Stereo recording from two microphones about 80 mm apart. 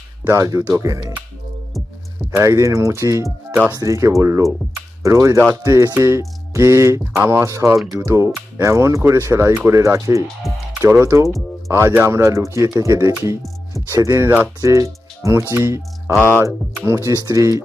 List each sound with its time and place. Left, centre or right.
0.3 s speech: right
2.4 s speech: right
3.5 s speech: right
3.8 s speech: right
10.5 s speech: centre
10.8 s speech: right